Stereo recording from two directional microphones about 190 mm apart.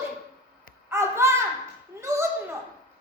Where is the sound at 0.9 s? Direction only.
15° right (ahead or behind).